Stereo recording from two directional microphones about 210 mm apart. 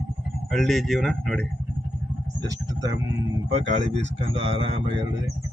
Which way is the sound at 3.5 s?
35° right (ahead or behind).